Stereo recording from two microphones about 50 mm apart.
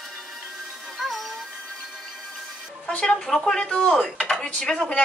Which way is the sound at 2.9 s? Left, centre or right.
Centre.